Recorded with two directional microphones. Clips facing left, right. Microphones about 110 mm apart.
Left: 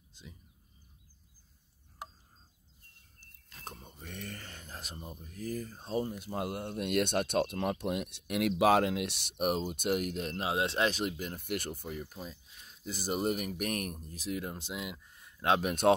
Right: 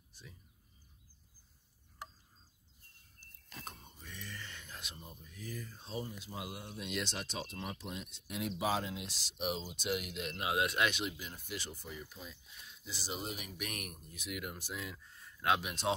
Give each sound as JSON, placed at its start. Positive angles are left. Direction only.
{"t": 3.6, "sound": "speech", "side_deg": 55}
{"t": 10.4, "sound": "speech", "side_deg": 30}
{"t": 15.6, "sound": "speech", "side_deg": 50}